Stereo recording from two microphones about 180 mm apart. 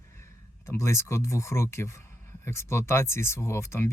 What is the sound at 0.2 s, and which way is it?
Speech, 15° left (ahead or behind).